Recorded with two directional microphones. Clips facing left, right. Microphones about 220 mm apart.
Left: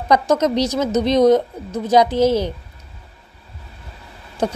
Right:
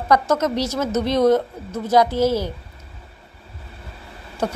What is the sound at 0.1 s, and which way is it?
Speech, 20° left (ahead or behind).